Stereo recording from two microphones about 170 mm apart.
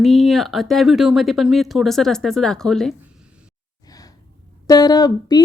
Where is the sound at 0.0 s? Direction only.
Centre (ahead or behind).